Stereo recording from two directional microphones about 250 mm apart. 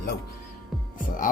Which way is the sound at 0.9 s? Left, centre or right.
Left.